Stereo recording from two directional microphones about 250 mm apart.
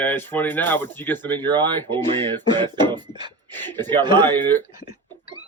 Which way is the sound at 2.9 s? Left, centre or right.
Centre.